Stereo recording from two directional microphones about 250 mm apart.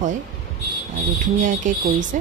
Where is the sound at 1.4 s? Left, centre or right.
Right.